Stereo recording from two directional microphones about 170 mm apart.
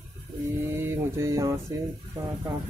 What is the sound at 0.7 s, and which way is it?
Speech, 15° right (ahead or behind).